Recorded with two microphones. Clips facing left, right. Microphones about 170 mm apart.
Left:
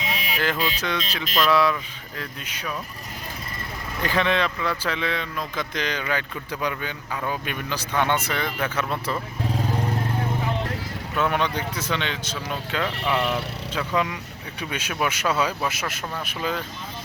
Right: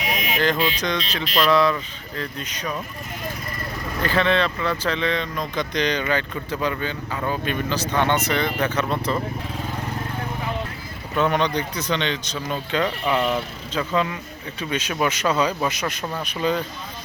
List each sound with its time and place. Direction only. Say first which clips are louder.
0.0 s music: right 3 dB; 25° left (ahead or behind)
0.8 s speech: right 3 dB; 10° left (ahead or behind)
4.0 s speech: right 2 dB; 15° left (ahead or behind)
11.2 s speech: right 3 dB; 5° left (ahead or behind)